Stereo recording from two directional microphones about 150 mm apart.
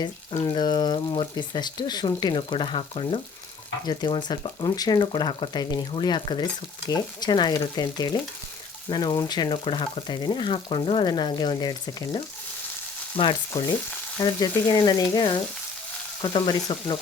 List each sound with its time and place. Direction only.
0.4 s speech: 30° left (ahead or behind)
13.5 s speech: 20° left (ahead or behind)